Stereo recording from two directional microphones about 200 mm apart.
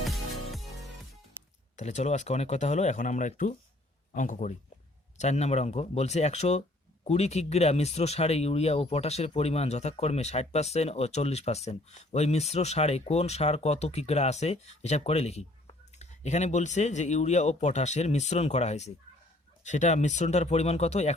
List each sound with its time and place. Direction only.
0.0 s music: centre (ahead or behind)
1.7 s speech: 35° left (ahead or behind)